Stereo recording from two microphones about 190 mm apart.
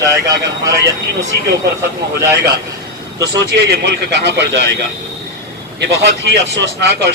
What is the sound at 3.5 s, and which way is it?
A man's voice, 60° right (ahead or behind).